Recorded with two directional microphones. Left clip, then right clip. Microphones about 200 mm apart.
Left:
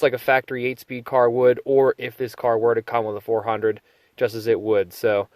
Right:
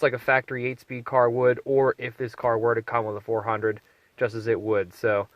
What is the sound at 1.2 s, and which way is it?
Speech, 40° left (ahead or behind).